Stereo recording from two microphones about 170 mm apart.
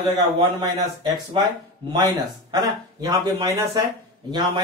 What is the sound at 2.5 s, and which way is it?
Speech, 20° right (ahead or behind).